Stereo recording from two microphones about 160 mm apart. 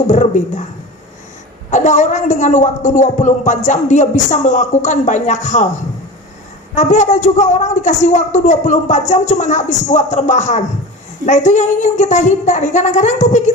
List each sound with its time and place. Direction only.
0.1 s a woman's voice: 50° left (ahead or behind)
1.7 s a woman's voice: 50° left (ahead or behind)